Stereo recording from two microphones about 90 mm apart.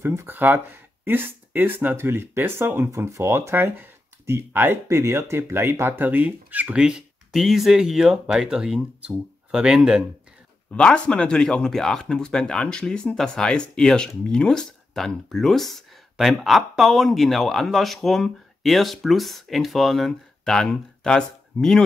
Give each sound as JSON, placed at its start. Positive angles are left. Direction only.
{"t": 0.0, "sound": "speech", "side_deg": -30}
{"t": 10.7, "sound": "speech", "side_deg": 10}